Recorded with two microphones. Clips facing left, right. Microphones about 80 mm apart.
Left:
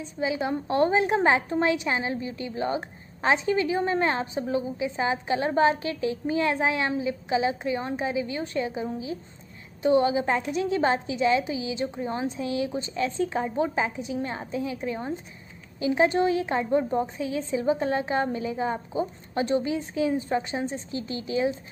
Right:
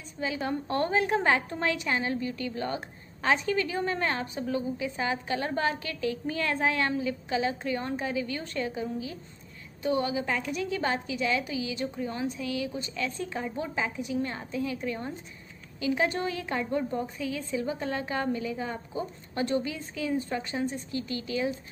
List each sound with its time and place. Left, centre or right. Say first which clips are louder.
0.0 s a woman's voice: left 5 dB; centre